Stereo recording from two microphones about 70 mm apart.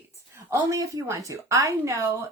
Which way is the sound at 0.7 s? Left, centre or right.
Right.